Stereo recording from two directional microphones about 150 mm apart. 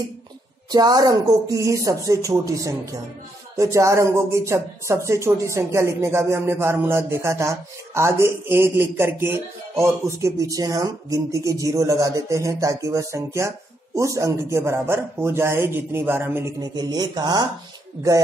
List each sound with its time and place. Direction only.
0.7 s speech: 25° right (ahead or behind)
16.7 s speech: 25° right (ahead or behind)